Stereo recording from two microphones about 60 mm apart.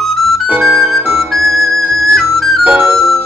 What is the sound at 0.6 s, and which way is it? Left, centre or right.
Music, right.